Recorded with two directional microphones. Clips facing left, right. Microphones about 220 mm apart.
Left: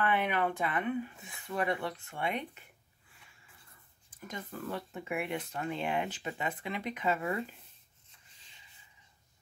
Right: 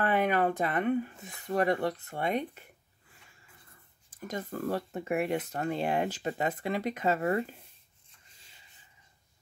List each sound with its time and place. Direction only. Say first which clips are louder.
0.0 s speech: right 4 dB; 40° right (ahead or behind)
4.3 s speech: right 7 dB; 40° right (ahead or behind)